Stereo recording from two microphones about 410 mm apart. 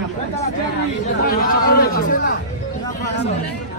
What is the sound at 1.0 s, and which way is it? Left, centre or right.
Speech, left.